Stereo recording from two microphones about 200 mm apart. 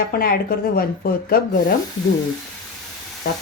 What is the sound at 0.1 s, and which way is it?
Speech, 50° left (ahead or behind).